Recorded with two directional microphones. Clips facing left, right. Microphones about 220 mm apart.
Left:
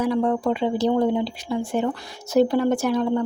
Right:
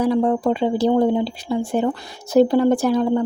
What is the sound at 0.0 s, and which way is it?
Speech, 30° right (ahead or behind).